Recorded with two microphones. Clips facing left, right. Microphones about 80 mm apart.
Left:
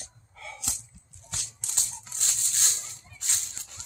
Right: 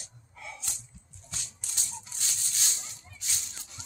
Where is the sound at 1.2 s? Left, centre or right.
Left.